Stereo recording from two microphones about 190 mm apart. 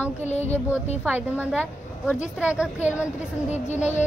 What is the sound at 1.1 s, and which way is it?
A woman's voice, 10° right (ahead or behind).